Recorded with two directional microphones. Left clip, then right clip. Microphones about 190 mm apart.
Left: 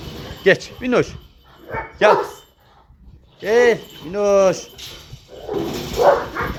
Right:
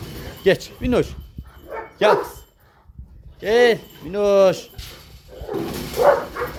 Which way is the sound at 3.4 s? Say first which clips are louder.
Left 1 dB; 15° right (ahead or behind).